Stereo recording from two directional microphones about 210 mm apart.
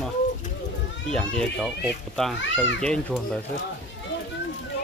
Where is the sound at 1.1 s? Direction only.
5° left (ahead or behind).